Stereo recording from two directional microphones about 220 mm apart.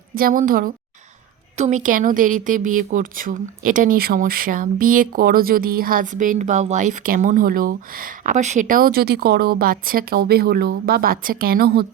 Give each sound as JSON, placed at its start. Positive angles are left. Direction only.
{"t": 0.1, "sound": "speech", "side_deg": -40}